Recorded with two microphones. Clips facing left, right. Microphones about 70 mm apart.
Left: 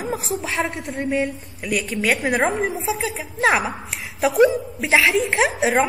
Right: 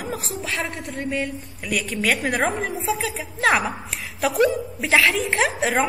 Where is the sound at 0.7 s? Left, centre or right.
Left.